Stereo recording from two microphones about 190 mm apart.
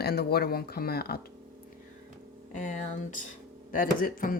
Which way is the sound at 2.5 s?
40° left (ahead or behind).